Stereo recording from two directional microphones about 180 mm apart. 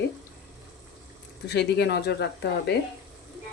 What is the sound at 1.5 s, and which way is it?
Speech, 65° left (ahead or behind).